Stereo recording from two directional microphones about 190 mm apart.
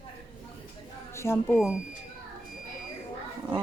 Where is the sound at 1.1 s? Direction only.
15° left (ahead or behind).